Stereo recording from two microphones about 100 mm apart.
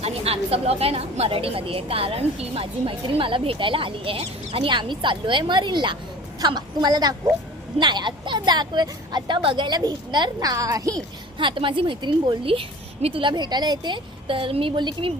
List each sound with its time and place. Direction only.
0.0 s a woman's voice: 85° right; by 4.7 s 70° right (ahead or behind)
4.7 s a woman's voice: 50° right (ahead or behind); by 10.9 s 35° right (ahead or behind)
11.3 s a woman's voice: 55° right (ahead or behind)
12.5 s a woman's voice: 70° right (ahead or behind)
13.3 s a woman's voice: 45° right (ahead or behind)